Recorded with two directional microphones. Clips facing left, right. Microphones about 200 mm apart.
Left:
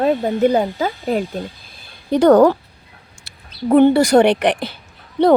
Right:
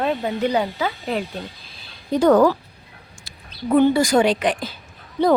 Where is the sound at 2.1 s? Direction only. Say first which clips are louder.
Left 4 dB; 70° left (ahead or behind).